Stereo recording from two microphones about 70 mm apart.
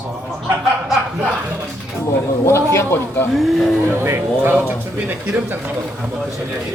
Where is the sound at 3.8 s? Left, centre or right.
Right.